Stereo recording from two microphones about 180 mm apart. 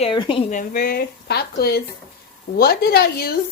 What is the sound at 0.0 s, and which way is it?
Speech, 25° left (ahead or behind).